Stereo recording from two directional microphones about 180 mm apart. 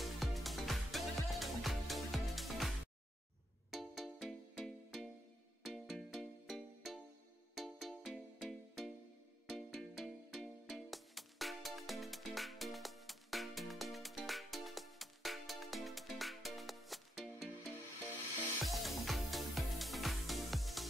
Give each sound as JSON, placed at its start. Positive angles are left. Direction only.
{"t": 0.0, "sound": "music", "side_deg": 0}
{"t": 3.7, "sound": "music", "side_deg": 0}
{"t": 18.6, "sound": "music", "side_deg": 0}